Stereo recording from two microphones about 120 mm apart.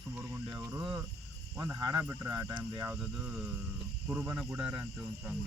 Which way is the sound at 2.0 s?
20° right (ahead or behind).